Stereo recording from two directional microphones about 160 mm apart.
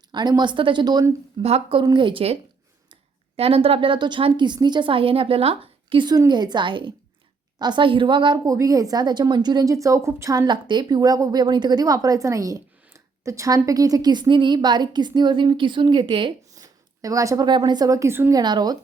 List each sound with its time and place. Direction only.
0.1 s a woman's voice: 25° right (ahead or behind)
1.4 s a woman's voice: 40° right (ahead or behind)
1.8 s a woman's voice: 30° right (ahead or behind)